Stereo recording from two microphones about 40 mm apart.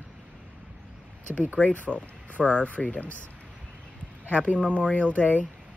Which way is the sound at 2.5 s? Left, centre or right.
Left.